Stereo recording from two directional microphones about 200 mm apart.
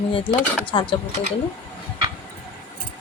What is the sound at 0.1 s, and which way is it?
Speech, 25° left (ahead or behind).